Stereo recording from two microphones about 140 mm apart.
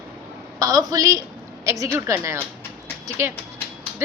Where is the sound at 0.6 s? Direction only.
25° right (ahead or behind).